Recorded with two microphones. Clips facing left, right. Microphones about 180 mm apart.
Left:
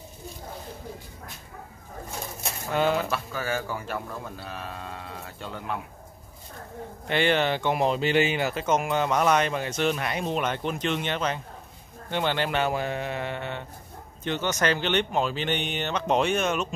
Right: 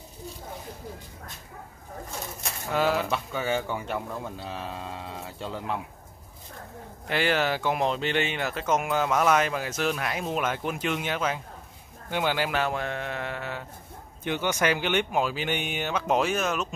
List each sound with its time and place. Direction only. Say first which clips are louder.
2.7 s speech: left 1 dB; centre (ahead or behind)
3.1 s speech: right 2 dB; 20° right (ahead or behind)
7.1 s speech: left 2 dB; 5° right (ahead or behind)